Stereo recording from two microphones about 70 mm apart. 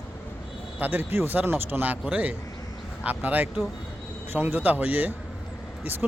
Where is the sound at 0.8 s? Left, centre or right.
Right.